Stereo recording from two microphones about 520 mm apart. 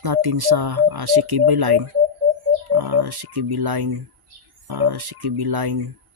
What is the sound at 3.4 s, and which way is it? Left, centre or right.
Speech, right.